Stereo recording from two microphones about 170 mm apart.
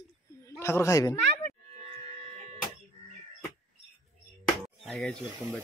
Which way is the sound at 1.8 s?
30° right (ahead or behind).